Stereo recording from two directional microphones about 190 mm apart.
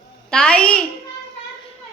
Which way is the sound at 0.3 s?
5° left (ahead or behind).